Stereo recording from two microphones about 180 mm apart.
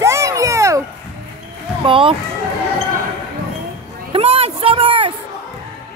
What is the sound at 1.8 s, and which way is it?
Speech, 30° right (ahead or behind).